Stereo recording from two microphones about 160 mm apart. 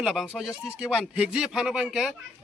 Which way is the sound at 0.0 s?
5° right (ahead or behind).